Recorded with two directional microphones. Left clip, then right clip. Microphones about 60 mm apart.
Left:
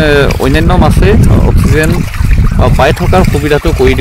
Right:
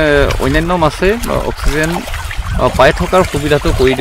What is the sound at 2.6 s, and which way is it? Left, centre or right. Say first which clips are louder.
Speech: even; left.